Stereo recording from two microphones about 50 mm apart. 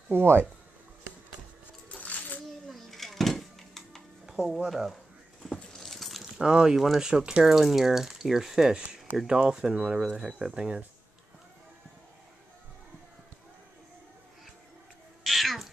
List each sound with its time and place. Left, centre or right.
0.1 s speech: right
1.9 s music: left
2.7 s music: centre
4.3 s music: centre
4.6 s speech: centre
5.4 s keys jangling: centre
5.9 s keys jangling: centre
6.4 s speech: centre
7.1 s speech: centre
15.2 s cat: centre